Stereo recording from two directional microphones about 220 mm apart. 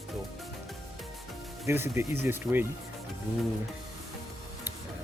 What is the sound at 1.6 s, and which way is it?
Speech, 10° right (ahead or behind).